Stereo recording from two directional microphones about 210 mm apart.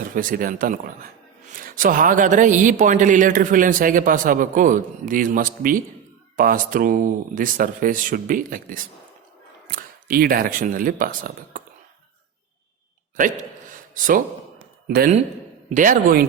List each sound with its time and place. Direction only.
0.0 s a man's voice: 40° right (ahead or behind)
13.1 s a sound: 40° right (ahead or behind)
14.8 s a man's voice: 45° right (ahead or behind)